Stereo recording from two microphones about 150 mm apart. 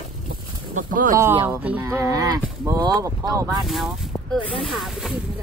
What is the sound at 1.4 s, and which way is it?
Speech, 15° right (ahead or behind).